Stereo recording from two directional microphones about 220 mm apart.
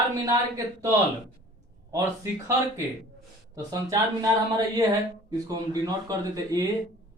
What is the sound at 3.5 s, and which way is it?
Speech, 15° right (ahead or behind).